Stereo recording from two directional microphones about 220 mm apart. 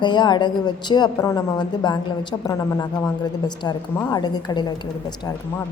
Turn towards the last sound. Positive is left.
turn(degrees=20)  # may be behind; listen again after turning